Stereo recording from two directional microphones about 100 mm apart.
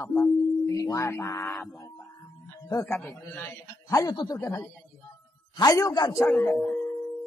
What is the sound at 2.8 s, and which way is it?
Speech, centre (ahead or behind).